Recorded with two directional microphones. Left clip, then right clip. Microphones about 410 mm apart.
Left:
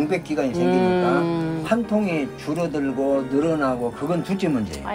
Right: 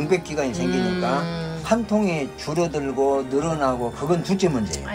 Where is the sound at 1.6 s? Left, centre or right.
Centre.